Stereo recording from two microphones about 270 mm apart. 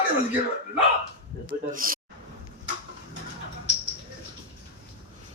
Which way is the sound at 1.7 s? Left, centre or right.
Right.